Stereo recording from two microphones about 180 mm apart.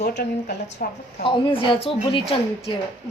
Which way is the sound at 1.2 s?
30° left (ahead or behind).